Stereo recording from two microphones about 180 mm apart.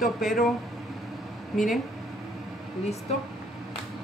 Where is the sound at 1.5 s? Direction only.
Centre (ahead or behind).